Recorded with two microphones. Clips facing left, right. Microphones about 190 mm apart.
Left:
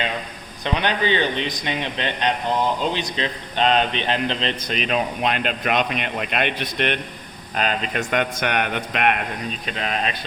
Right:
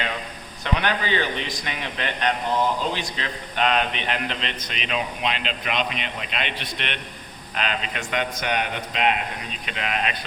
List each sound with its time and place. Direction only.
0.6 s a man's voice: 20° left (ahead or behind)
4.7 s speech: 45° left (ahead or behind); by 9.2 s 60° left (ahead or behind)
9.6 s a man's voice: 40° left (ahead or behind)